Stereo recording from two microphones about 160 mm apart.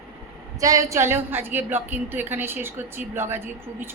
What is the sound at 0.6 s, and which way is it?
A woman's voice, 20° right (ahead or behind).